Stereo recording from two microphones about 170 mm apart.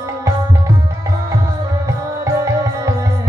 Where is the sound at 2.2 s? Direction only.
20° right (ahead or behind).